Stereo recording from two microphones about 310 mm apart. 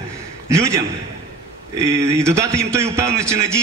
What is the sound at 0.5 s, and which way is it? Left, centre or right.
Speech, centre.